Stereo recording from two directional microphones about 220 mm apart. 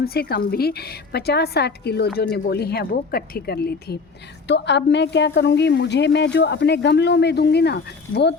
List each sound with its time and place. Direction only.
0.0 s a woman's voice: 45° left (ahead or behind)